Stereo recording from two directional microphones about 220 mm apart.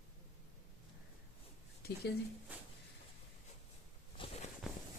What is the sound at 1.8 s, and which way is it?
Speech, 45° left (ahead or behind).